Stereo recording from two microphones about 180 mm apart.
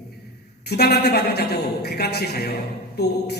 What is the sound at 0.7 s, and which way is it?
A man's voice, 65° left (ahead or behind).